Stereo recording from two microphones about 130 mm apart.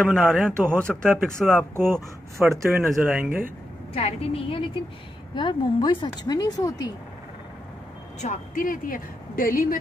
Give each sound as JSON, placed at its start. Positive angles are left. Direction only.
{"t": 0.1, "sound": "speech", "side_deg": 5}
{"t": 1.1, "sound": "speech", "side_deg": -10}
{"t": 3.9, "sound": "a woman's voice", "side_deg": 50}
{"t": 8.2, "sound": "a woman's voice", "side_deg": 80}